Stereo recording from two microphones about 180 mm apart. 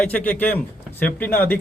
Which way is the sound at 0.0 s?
10° left (ahead or behind).